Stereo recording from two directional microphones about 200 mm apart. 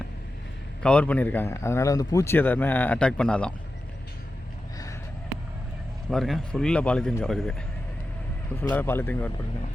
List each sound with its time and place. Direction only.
0.8 s a man's voice: 5° left (ahead or behind)
6.1 s speech: centre (ahead or behind)
8.5 s a man's voice: 10° left (ahead or behind)